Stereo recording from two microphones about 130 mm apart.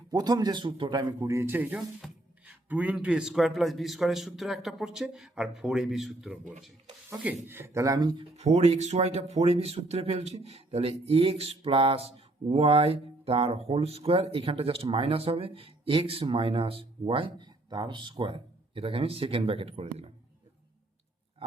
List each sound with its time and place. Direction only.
0.1 s a man's voice: 30° right (ahead or behind); by 6.4 s 5° right (ahead or behind)
7.4 s speech: 15° right (ahead or behind); by 8.3 s 35° right (ahead or behind)
8.4 s speech: 60° right (ahead or behind)